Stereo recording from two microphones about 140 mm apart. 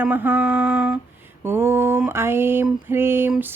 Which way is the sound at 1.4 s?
15° right (ahead or behind).